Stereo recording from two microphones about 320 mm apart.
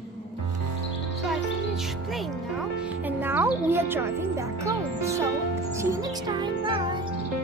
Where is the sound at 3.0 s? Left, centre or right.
Centre.